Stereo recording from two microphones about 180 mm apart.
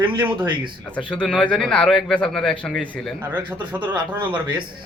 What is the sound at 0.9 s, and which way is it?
Speech, 5° left (ahead or behind).